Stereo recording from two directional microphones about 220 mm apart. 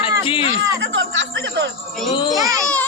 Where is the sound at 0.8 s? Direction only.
55° right (ahead or behind).